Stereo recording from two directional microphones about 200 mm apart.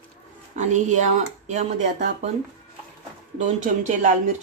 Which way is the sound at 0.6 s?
40° right (ahead or behind).